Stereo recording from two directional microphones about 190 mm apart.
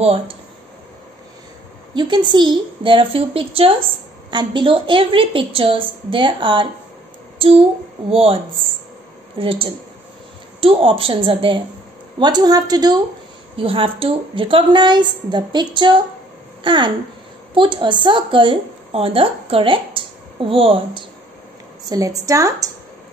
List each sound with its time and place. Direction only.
0.0 s speech: 30° right (ahead or behind)
2.0 s a woman's voice: 25° right (ahead or behind)
9.4 s a woman's voice: 30° right (ahead or behind)